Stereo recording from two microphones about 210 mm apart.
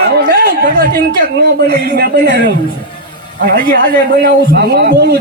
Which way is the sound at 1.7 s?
45° right (ahead or behind).